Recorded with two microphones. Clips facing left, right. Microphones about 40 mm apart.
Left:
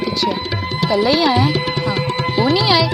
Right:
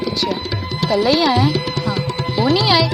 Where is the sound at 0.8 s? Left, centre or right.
Centre.